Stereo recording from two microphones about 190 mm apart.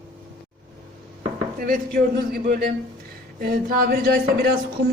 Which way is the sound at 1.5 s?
50° right (ahead or behind).